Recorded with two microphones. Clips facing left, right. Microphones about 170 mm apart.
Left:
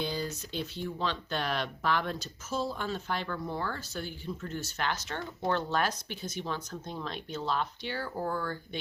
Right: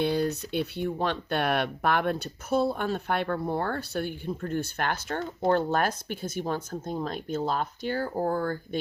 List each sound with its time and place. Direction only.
0.0 s speech: 65° right (ahead or behind); by 8.8 s 45° right (ahead or behind)